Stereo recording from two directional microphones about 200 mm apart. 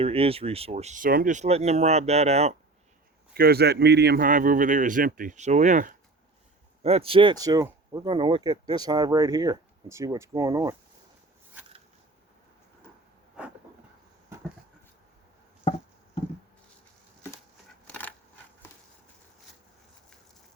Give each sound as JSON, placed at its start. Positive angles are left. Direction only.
{"t": 0.0, "sound": "speech", "side_deg": -30}
{"t": 3.3, "sound": "a man's voice", "side_deg": -50}
{"t": 13.4, "sound": "a sound", "side_deg": -5}